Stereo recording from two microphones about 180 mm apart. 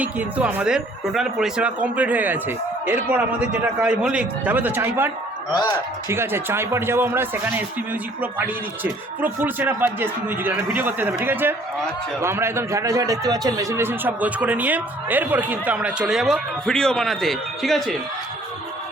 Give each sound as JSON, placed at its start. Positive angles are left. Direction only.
{"t": 0.0, "sound": "speech", "side_deg": -10}
{"t": 5.5, "sound": "speech", "side_deg": 25}
{"t": 6.1, "sound": "speech", "side_deg": -15}